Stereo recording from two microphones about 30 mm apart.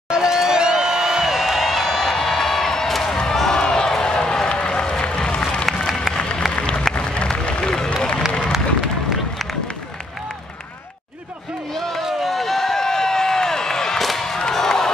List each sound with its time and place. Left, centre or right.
0.1 s crowd: right; by 1.9 s centre
1.9 s crowd: centre
3.5 s a sound: left
4.5 s run: left
5.0 s applause: left
5.7 s a sound: centre
6.1 s applause: left
7.3 s run: left
11.7 s music: centre
12.2 s a sound: centre
13.9 s music: centre
14.5 s a sound: centre